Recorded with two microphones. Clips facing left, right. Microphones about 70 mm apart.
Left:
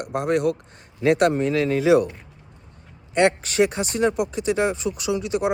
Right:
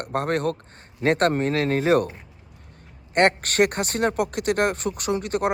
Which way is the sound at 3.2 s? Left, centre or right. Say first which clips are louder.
Even; right.